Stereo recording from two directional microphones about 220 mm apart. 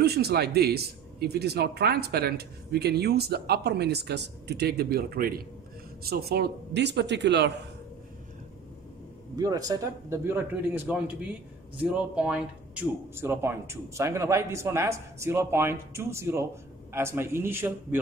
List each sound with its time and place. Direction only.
0.0 s speech: 45° right (ahead or behind)
9.4 s speech: 15° right (ahead or behind)